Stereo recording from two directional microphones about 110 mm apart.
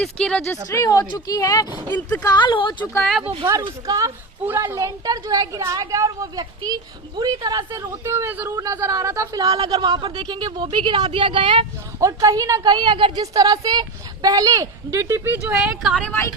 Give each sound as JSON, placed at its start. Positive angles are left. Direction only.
{"t": 0.0, "sound": "speech", "side_deg": 5}
{"t": 0.7, "sound": "speech", "side_deg": 30}
{"t": 2.2, "sound": "speech", "side_deg": 40}
{"t": 3.0, "sound": "speech", "side_deg": 0}
{"t": 3.6, "sound": "a woman's voice", "side_deg": -35}
{"t": 4.4, "sound": "a woman's voice", "side_deg": -20}
{"t": 11.9, "sound": "a woman's voice", "side_deg": -30}
{"t": 13.3, "sound": "a woman's voice", "side_deg": -35}
{"t": 15.5, "sound": "speech", "side_deg": -10}